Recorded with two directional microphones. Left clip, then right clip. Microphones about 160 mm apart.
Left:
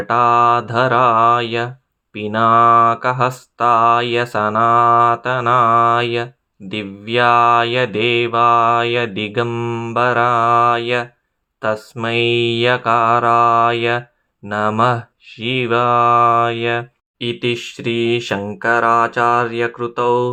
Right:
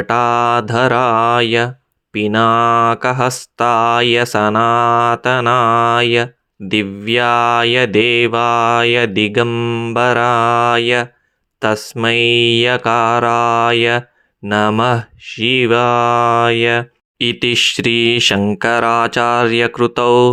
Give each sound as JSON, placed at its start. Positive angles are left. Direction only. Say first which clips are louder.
{"t": 0.0, "sound": "mantra", "louder": "left 1 dB", "side_deg": -30}
{"t": 9.5, "sound": "mantra", "louder": "right 4 dB", "side_deg": -20}
{"t": 9.9, "sound": "mantra", "louder": "right 1 dB", "side_deg": -30}
{"t": 18.6, "sound": "speech", "louder": "left 1 dB", "side_deg": -50}